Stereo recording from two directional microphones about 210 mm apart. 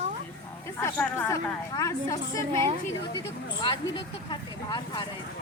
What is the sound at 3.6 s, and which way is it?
Speech, 20° left (ahead or behind).